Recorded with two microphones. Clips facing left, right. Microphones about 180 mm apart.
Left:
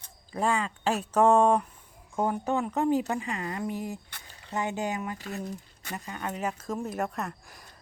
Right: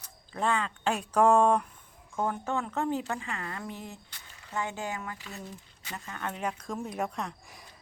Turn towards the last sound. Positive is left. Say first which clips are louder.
# left 2 dB
turn(degrees=0)  # may be behind; listen again after turning